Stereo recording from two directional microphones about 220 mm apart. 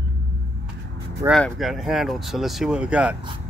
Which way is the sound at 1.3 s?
Centre (ahead or behind).